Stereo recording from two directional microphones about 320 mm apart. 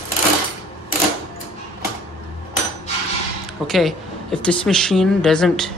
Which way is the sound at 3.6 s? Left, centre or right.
Centre.